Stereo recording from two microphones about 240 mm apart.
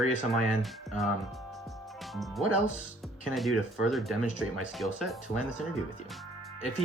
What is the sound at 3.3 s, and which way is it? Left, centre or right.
Speech, centre.